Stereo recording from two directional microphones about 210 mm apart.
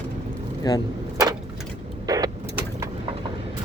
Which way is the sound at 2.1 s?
15° right (ahead or behind).